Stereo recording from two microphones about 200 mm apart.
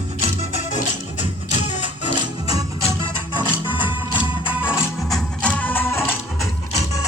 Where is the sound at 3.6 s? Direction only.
10° right (ahead or behind).